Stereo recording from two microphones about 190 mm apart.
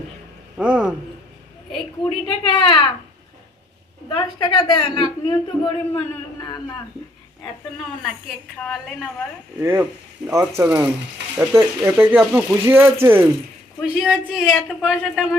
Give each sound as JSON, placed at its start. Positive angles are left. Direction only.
{"t": 0.5, "sound": "a man's voice", "side_deg": -5}
{"t": 2.0, "sound": "a woman's voice", "side_deg": 25}
{"t": 4.1, "sound": "a woman's voice", "side_deg": 25}
{"t": 8.5, "sound": "a man's voice", "side_deg": 5}
{"t": 9.6, "sound": "a man's voice", "side_deg": -15}